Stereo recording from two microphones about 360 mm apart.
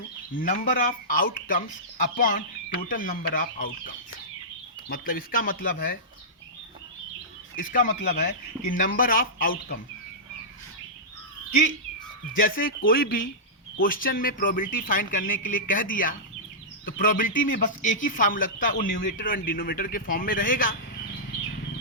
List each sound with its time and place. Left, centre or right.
0.3 s speech: left
7.6 s speech: left
12.4 s speech: left